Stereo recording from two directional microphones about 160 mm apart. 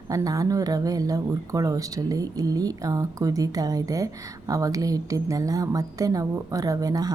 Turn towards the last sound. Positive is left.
turn(degrees=-25)  # may be behind; listen again after turning